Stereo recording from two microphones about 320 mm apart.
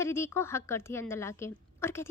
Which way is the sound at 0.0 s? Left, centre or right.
Centre.